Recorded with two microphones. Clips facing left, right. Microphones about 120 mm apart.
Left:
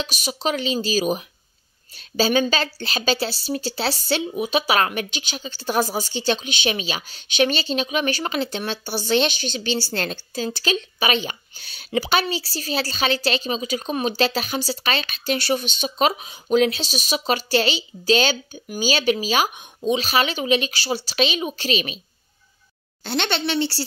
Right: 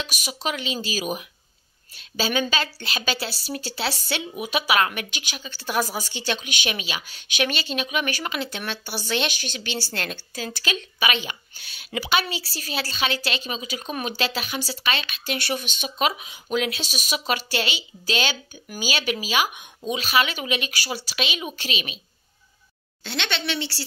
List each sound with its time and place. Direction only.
0.0 s a woman's voice: 30° left (ahead or behind)
23.0 s a woman's voice: 40° left (ahead or behind)